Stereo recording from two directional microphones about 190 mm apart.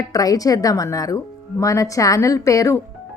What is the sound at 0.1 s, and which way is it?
Speech, 20° left (ahead or behind).